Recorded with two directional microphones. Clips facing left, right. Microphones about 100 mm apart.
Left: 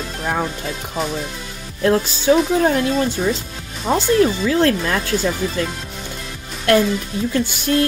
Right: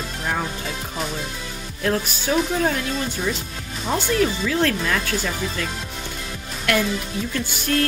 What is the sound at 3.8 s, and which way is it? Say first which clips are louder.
Speech: left 6 dB; 35° left (ahead or behind).